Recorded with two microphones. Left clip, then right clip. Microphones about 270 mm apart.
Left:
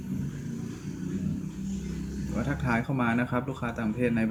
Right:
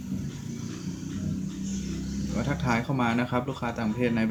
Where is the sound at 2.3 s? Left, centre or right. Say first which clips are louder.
Right 1 dB; centre.